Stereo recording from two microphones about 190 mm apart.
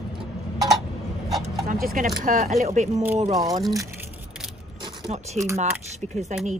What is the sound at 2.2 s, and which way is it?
Speech, 40° right (ahead or behind).